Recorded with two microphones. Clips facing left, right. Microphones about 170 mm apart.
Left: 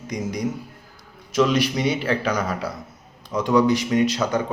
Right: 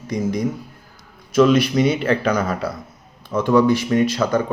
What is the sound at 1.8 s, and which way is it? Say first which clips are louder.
Speech: right 5 dB; 50° right (ahead or behind).